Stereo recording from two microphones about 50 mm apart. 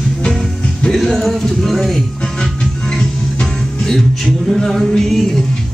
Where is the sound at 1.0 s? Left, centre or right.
Centre.